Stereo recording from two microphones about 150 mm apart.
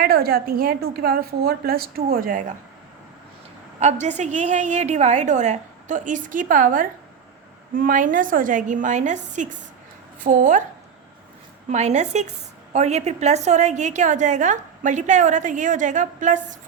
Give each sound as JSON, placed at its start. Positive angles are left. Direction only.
{"t": 0.0, "sound": "a woman's voice", "side_deg": -90}
{"t": 3.8, "sound": "a woman's voice", "side_deg": -50}
{"t": 11.7, "sound": "a woman's voice", "side_deg": -50}